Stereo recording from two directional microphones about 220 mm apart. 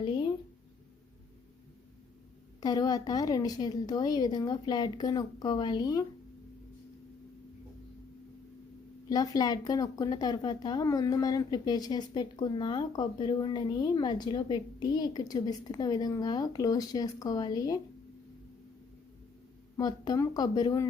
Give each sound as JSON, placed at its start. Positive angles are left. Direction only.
{"t": 0.0, "sound": "a sound", "side_deg": 20}
{"t": 2.6, "sound": "speech", "side_deg": 15}
{"t": 9.0, "sound": "speech", "side_deg": 15}
{"t": 19.7, "sound": "speech", "side_deg": 15}